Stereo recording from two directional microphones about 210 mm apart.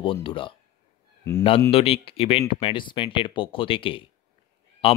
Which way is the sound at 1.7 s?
25° left (ahead or behind).